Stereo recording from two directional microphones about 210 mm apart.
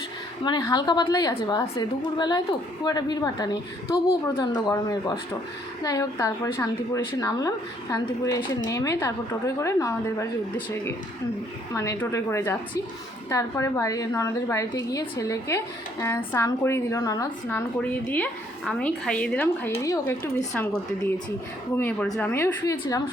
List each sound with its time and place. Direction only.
0.4 s a woman's voice: 20° left (ahead or behind)
11.7 s a woman's voice: 15° left (ahead or behind)
18.1 s a woman's voice: 5° left (ahead or behind)